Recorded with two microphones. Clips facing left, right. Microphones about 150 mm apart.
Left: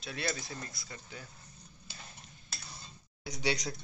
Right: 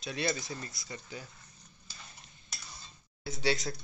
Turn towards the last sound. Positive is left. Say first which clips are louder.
# right 2 dB
turn(degrees=20)  # may be behind; listen again after turning